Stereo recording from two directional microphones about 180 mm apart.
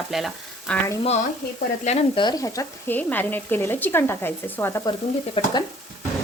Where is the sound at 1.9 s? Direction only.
40° left (ahead or behind).